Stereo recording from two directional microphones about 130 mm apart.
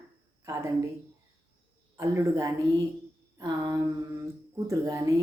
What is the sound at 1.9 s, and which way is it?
Speech, 25° right (ahead or behind).